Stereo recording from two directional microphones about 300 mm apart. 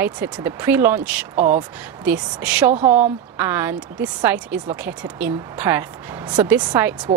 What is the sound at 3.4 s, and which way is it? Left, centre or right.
Speech, centre.